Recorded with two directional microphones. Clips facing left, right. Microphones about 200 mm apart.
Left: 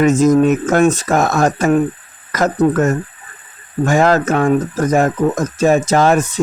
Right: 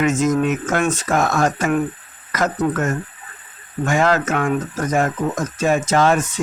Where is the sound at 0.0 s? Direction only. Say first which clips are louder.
Left 6 dB; 35° left (ahead or behind).